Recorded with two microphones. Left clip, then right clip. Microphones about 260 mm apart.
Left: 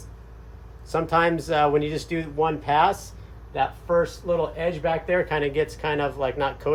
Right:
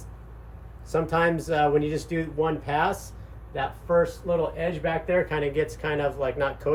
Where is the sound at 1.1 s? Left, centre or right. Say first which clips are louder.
Left 3 dB; centre.